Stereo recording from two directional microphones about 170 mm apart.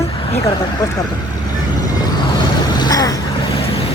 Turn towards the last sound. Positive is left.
turn(degrees=20)  # may be behind; listen again after turning